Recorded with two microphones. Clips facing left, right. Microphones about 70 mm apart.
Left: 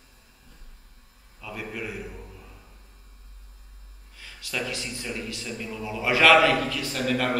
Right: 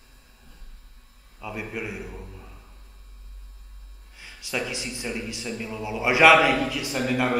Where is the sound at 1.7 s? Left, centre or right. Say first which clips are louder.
Right 1 dB; centre.